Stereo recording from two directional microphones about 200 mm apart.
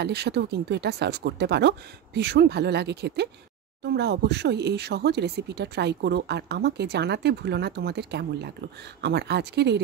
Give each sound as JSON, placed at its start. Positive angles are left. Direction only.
{"t": 0.0, "sound": "speech", "side_deg": -55}